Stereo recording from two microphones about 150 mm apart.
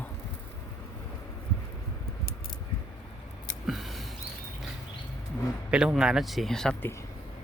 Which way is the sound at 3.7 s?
Centre (ahead or behind).